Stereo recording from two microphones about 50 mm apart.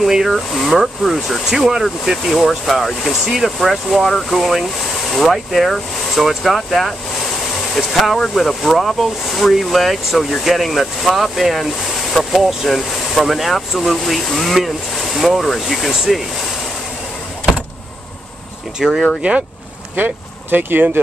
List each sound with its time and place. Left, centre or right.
0.0 s speech: centre
1.6 s speech: centre
2.2 s speech: centre
18.8 s speech: centre
20.0 s speech: right